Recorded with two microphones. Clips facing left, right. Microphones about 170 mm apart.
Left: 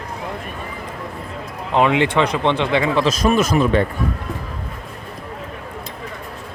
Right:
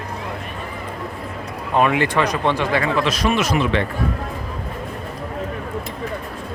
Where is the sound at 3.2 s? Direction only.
45° left (ahead or behind).